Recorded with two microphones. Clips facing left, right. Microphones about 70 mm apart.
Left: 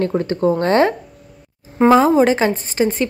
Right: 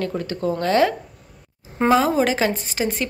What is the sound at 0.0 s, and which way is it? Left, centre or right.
A woman's voice, left.